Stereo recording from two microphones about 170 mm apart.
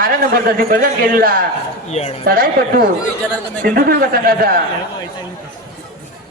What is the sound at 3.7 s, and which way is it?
Speech, 60° right (ahead or behind).